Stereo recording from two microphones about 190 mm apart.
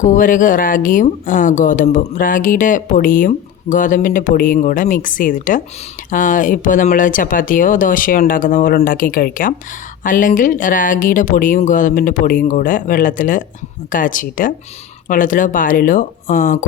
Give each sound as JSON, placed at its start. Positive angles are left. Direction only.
{"t": 0.0, "sound": "speech", "side_deg": 45}